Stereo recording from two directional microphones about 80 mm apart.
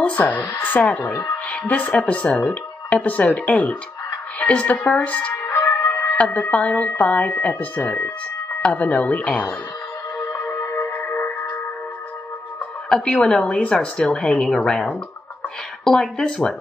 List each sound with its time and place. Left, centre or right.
0.0 s a woman's voice: centre
5.5 s music: left
5.9 s music: centre
6.5 s speech: centre
10.1 s music: left
12.9 s a woman's voice: centre